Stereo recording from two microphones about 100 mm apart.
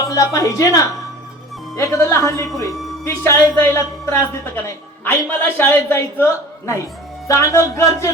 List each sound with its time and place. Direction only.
0.1 s speech: 35° left (ahead or behind)